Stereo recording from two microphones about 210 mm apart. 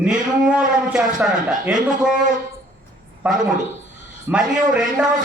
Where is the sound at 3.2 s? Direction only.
5° right (ahead or behind).